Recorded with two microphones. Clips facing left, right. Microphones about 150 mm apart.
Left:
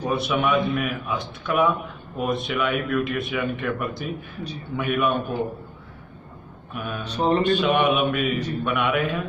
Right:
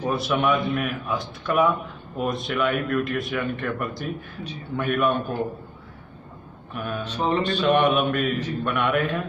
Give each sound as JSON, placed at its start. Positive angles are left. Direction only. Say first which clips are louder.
{"t": 0.0, "sound": "a man's voice", "louder": "even", "side_deg": 0}
{"t": 6.7, "sound": "a man's voice", "louder": "right 1 dB", "side_deg": 0}
{"t": 7.3, "sound": "speech", "louder": "left 5 dB", "side_deg": 45}
{"t": 7.6, "sound": "a man's voice", "louder": "right 1 dB", "side_deg": 0}